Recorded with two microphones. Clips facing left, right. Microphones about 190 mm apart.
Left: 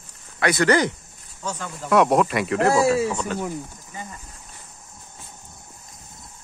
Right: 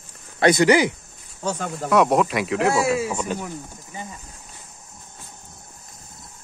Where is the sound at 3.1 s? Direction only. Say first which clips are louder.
Even; 15° right (ahead or behind).